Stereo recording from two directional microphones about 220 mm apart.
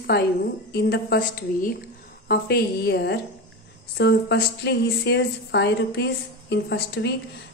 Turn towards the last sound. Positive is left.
turn(degrees=50)  # may be behind; listen again after turning